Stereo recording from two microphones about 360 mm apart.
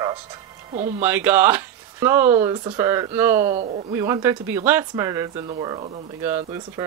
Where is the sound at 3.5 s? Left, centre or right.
Right.